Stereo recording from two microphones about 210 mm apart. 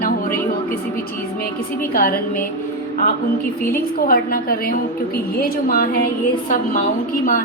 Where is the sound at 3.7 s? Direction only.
45° left (ahead or behind).